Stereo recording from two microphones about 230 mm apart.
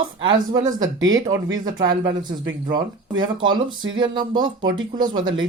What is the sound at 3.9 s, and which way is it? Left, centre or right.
Speech, centre.